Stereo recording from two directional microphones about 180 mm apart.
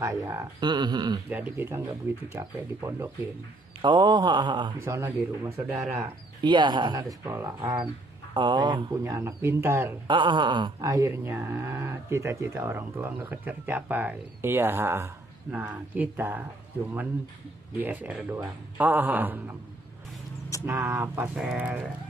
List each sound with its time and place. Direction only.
0.0 s speech: 20° right (ahead or behind)
1.3 s speech: 10° right (ahead or behind)
4.7 s speech: 15° right (ahead or behind)
10.0 s speech: 25° right (ahead or behind); by 16.4 s 10° right (ahead or behind)
17.7 s speech: 10° right (ahead or behind)
20.6 s speech: 10° right (ahead or behind)